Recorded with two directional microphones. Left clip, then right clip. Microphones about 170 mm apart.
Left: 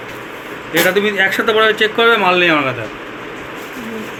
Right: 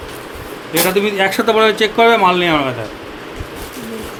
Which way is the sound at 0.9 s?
65° right (ahead or behind).